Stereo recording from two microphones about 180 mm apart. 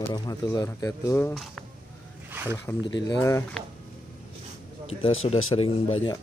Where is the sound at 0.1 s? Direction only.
20° left (ahead or behind).